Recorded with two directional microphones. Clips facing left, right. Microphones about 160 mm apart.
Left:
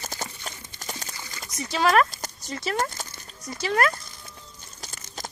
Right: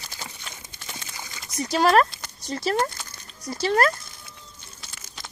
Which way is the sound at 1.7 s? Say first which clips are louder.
Right 2 dB; 40° right (ahead or behind).